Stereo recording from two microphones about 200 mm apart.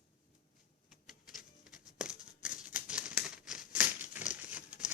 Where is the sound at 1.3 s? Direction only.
Centre (ahead or behind).